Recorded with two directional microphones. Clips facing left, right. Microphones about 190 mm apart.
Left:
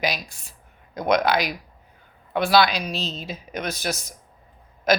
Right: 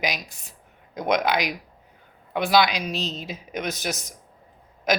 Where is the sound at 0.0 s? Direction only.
15° right (ahead or behind).